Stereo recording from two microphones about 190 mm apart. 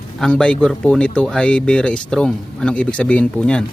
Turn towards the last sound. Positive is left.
turn(degrees=5)  # may be behind; listen again after turning